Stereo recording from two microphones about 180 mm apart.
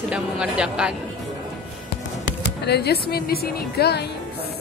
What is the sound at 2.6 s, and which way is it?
Speech, 65° left (ahead or behind).